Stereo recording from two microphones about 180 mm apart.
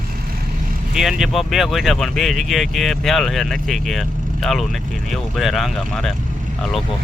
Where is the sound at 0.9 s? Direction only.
Centre (ahead or behind).